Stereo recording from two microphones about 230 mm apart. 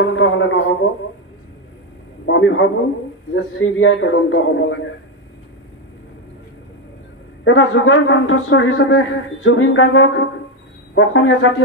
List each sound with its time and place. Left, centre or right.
0.0 s a man's voice: left
2.2 s a man's voice: left
7.4 s a man's voice: left